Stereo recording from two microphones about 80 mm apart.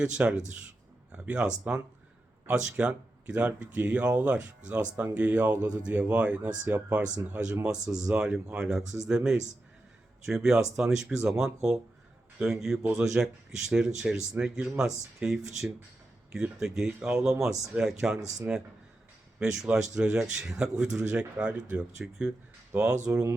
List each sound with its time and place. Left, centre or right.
0.0 s speech: centre